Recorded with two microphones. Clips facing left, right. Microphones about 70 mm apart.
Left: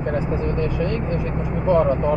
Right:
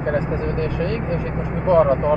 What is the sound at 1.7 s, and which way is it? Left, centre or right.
Speech, right.